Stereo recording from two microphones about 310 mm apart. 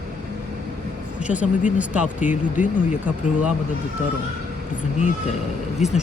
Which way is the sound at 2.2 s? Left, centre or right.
Left.